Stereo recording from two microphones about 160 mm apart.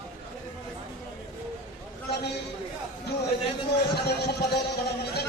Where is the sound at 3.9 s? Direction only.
80° left.